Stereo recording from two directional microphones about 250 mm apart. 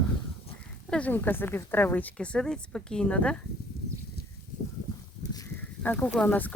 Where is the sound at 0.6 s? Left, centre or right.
Centre.